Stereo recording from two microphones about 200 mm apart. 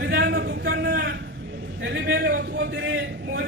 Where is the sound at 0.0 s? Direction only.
55° right (ahead or behind).